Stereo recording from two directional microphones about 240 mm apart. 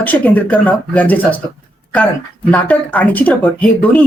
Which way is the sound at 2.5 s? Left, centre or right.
Centre.